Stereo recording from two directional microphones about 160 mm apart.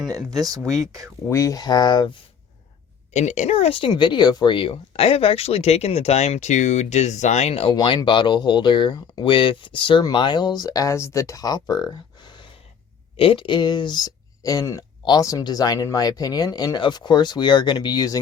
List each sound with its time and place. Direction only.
0.1 s speech: 25° right (ahead or behind)
1.3 s speech: 20° left (ahead or behind)
3.1 s speech: 45° left (ahead or behind); by 18.2 s 25° left (ahead or behind)